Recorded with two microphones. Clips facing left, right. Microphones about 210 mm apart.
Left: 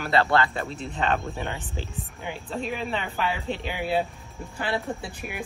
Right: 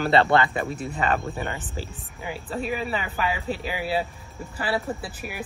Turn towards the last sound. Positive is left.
turn(degrees=-5)  # may be behind; listen again after turning